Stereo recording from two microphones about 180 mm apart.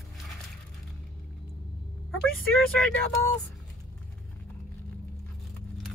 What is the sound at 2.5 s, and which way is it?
Speech, 5° left (ahead or behind).